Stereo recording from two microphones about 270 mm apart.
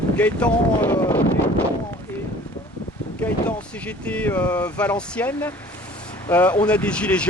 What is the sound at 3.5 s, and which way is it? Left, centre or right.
Speech, centre.